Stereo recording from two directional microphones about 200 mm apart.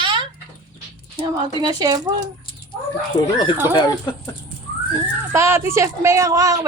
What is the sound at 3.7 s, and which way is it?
Speech, 20° left (ahead or behind).